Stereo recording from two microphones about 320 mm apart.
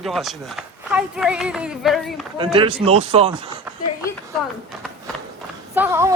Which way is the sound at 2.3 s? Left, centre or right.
Centre.